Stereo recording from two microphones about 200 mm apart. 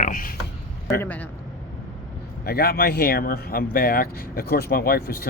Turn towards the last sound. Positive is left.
turn(degrees=50)  # may be behind; listen again after turning